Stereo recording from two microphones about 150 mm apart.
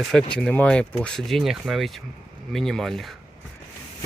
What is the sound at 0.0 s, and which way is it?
Speech, centre (ahead or behind).